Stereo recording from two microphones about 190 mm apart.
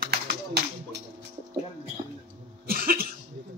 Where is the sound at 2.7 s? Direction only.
50° right (ahead or behind).